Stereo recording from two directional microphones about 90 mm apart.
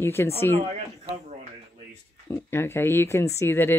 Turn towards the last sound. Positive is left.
turn(degrees=25)  # may be behind; listen again after turning